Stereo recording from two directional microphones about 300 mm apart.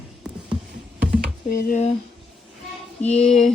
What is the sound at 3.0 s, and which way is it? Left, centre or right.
Speech, left.